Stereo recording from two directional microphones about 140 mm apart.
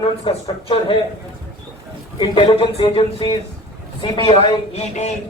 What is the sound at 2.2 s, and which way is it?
Speech, 40° left (ahead or behind).